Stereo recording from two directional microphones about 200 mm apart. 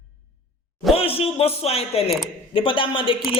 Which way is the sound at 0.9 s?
30° left (ahead or behind).